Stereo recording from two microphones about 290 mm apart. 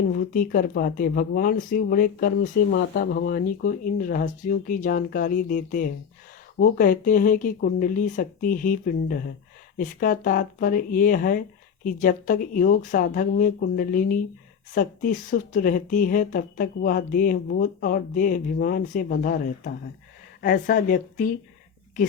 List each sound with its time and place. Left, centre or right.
0.1 s speech: left